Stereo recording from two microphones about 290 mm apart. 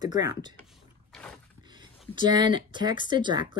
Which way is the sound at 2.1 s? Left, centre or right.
Centre.